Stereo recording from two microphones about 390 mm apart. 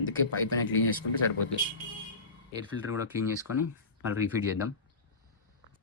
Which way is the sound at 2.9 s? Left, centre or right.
Centre.